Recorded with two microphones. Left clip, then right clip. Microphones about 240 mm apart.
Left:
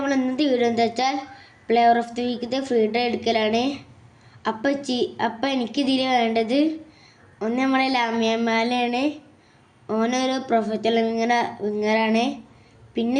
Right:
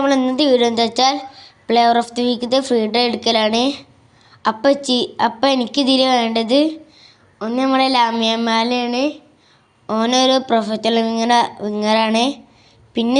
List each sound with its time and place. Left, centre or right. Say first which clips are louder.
0.0 s a woman's voice: right 7 dB; centre